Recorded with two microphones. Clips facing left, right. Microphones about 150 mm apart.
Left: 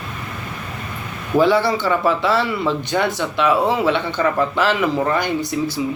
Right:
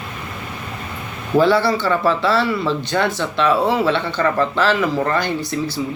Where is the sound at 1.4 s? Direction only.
15° left (ahead or behind).